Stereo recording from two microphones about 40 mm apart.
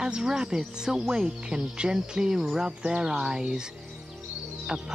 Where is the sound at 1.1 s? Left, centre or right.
Right.